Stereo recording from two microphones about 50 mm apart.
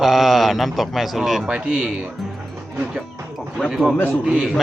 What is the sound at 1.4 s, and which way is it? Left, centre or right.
Speech, right.